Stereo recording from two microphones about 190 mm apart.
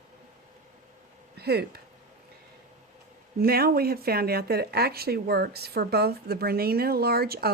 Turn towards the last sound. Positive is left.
turn(degrees=-55)  # may be behind; listen again after turning